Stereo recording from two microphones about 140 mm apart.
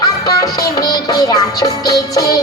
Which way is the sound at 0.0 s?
25° left (ahead or behind).